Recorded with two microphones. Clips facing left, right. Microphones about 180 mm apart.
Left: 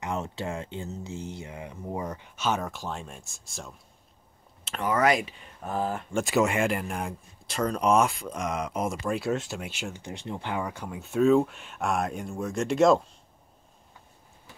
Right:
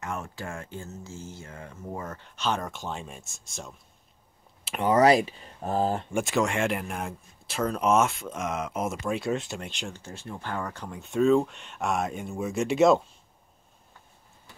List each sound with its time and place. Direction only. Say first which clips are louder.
0.0 s speech: left 3 dB; 20° left (ahead or behind); by 3.7 s centre (ahead or behind)
4.8 s speech: right 4 dB; 30° right (ahead or behind)
6.2 s speech: left 3 dB; centre (ahead or behind)
10.0 s speech: left 3 dB; 20° left (ahead or behind); by 13.0 s 5° right (ahead or behind)